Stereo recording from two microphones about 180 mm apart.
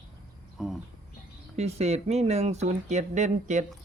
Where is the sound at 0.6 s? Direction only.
Centre (ahead or behind).